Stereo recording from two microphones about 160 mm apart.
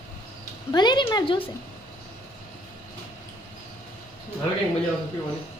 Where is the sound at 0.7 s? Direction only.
25° left (ahead or behind).